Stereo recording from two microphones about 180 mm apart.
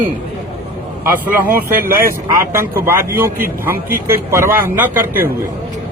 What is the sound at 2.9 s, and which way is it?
Speech, 15° right (ahead or behind).